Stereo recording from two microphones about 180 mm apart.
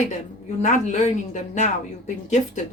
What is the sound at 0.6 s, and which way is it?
A woman's voice, 45° left (ahead or behind).